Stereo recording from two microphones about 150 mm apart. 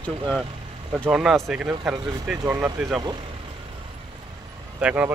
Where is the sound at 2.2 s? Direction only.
15° right (ahead or behind).